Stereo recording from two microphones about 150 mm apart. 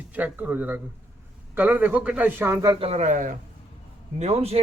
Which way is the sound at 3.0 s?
60° right (ahead or behind).